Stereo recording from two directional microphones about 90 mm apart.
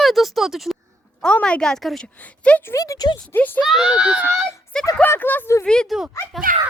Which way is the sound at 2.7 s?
40° left (ahead or behind).